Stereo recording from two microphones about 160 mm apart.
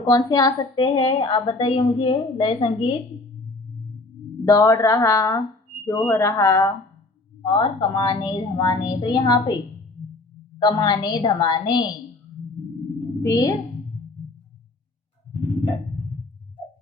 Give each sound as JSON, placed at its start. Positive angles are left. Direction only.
{"t": 0.0, "sound": "a woman's voice", "side_deg": 25}
{"t": 4.4, "sound": "a woman's voice", "side_deg": 20}
{"t": 7.4, "sound": "a woman's voice", "side_deg": 30}
{"t": 10.6, "sound": "a woman's voice", "side_deg": 25}
{"t": 13.2, "sound": "a woman's voice", "side_deg": 25}